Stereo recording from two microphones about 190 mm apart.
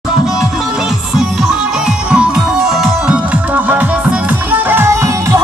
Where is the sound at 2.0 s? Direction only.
5° right (ahead or behind).